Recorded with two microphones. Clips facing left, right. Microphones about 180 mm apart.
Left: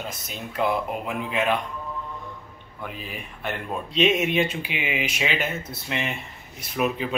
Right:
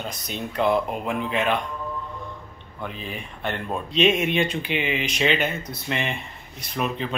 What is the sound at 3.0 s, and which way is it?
A man's voice, 5° left (ahead or behind).